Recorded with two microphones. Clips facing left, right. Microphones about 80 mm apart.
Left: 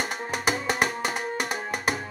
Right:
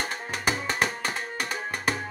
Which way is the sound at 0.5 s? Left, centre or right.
Centre.